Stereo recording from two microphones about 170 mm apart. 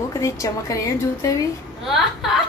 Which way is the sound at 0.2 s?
20° left (ahead or behind).